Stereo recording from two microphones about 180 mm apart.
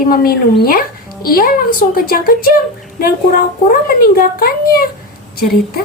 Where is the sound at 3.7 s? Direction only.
50° left (ahead or behind).